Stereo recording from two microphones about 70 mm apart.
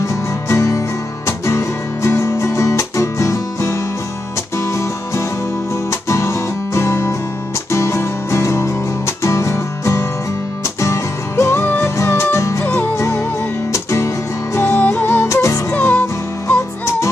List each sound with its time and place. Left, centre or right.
0.0 s music: left
12.6 s music: left
12.9 s music: left
14.6 s music: left
15.2 s music: left
15.7 s music: left